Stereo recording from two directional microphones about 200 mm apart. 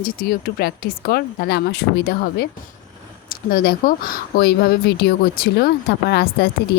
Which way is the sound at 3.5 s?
45° left (ahead or behind).